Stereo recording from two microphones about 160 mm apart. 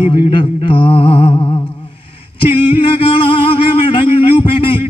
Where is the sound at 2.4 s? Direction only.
35° left (ahead or behind).